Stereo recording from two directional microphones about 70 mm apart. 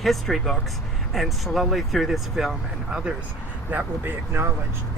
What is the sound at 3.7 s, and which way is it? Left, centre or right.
Speech, right.